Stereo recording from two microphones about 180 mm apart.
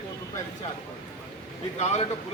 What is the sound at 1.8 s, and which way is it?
Speech, 35° left (ahead or behind).